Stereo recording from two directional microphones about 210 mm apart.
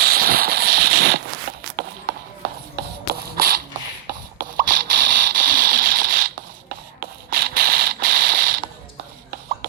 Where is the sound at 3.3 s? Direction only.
45° right (ahead or behind).